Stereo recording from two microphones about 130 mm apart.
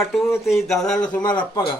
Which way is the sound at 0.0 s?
Centre (ahead or behind).